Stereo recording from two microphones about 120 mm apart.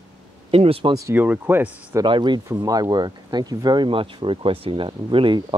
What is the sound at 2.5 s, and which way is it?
Speech, 30° right (ahead or behind).